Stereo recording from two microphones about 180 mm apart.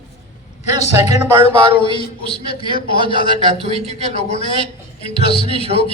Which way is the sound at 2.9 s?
25° right (ahead or behind).